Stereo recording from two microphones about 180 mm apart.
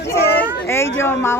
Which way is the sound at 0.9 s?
15° left (ahead or behind).